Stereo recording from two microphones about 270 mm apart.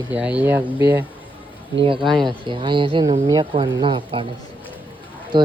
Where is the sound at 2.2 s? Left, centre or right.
Centre.